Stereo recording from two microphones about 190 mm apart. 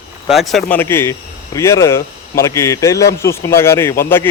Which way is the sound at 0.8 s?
15° left (ahead or behind).